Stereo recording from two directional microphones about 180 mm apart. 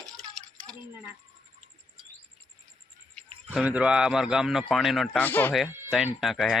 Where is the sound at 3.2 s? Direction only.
5° left (ahead or behind).